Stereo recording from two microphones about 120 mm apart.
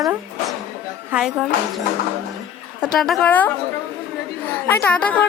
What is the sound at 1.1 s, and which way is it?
Speech, 15° right (ahead or behind).